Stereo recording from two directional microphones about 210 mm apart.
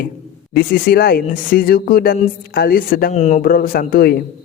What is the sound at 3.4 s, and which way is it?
Speech, 45° left (ahead or behind).